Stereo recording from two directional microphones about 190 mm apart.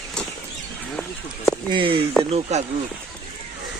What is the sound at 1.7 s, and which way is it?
Speech, 25° right (ahead or behind).